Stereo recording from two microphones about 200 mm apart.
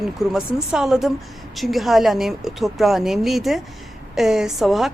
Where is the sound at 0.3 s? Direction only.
Centre (ahead or behind).